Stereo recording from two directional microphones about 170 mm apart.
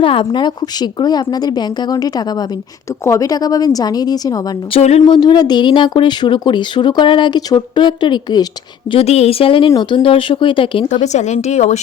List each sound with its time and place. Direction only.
0.0 s speech: 30° left (ahead or behind)
4.7 s speech: 40° left (ahead or behind)
5.0 s speech: 25° left (ahead or behind)
8.9 s speech: 35° left (ahead or behind)